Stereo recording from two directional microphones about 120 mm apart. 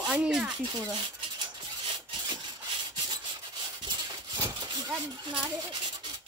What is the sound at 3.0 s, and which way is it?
Rub, 40° right (ahead or behind).